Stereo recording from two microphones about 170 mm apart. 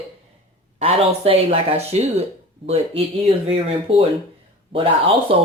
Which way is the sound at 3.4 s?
35° right (ahead or behind).